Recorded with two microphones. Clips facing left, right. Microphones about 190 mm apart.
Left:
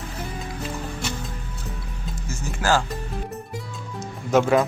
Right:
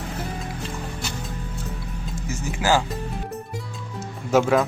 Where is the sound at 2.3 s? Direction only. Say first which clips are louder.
Right 1 dB; 15° right (ahead or behind).